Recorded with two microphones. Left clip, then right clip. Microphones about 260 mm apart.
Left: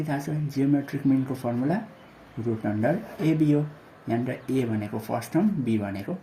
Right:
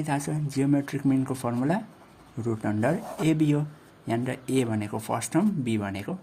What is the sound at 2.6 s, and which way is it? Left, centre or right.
Speech, right.